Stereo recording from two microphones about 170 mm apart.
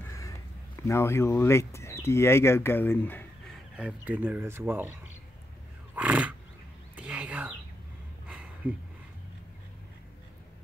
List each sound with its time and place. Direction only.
0.1 s speech: 20° left (ahead or behind)
3.7 s speech: 10° right (ahead or behind)
5.9 s wild animals: 10° right (ahead or behind)
7.0 s a sound: 10° right (ahead or behind)